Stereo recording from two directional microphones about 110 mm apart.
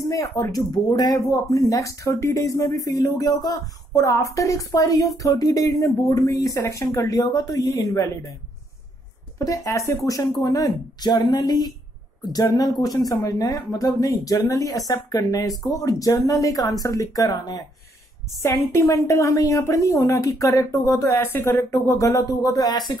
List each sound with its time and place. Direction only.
0.1 s speech: 30° left (ahead or behind)
9.4 s a woman's voice: 30° left (ahead or behind)
21.3 s a woman's voice: 20° left (ahead or behind); by 22.9 s 40° left (ahead or behind)